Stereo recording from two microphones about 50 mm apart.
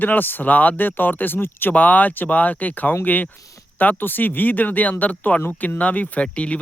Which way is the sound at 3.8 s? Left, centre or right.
Left.